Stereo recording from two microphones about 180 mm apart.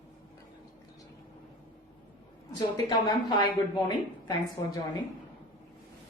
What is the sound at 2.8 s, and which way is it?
A woman's voice, 25° left (ahead or behind).